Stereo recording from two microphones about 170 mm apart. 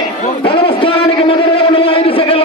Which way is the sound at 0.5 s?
30° left (ahead or behind).